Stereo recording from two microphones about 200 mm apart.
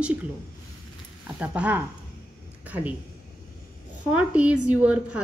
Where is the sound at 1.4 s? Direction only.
5° right (ahead or behind).